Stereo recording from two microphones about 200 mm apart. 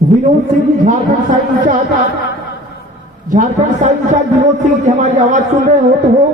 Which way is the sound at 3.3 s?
40° right (ahead or behind).